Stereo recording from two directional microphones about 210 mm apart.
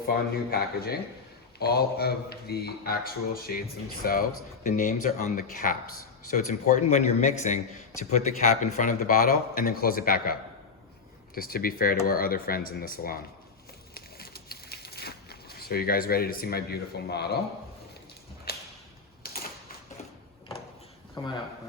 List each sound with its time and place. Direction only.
0.1 s speech: 45° left (ahead or behind)
11.3 s speech: 45° left (ahead or behind)
13.9 s a sound: 45° left (ahead or behind)
18.5 s whip: 45° left (ahead or behind)
21.2 s speech: 20° left (ahead or behind)